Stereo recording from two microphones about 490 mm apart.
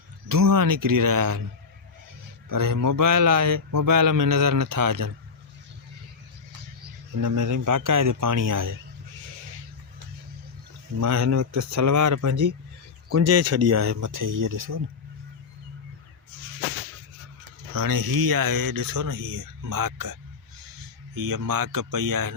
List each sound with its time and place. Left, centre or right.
0.3 s a man's voice: right
2.5 s a man's voice: right
7.2 s a man's voice: right
11.0 s a man's voice: right
17.7 s speech: right
21.2 s speech: right